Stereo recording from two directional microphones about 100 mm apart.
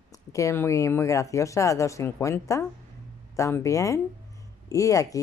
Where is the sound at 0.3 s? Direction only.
30° left (ahead or behind).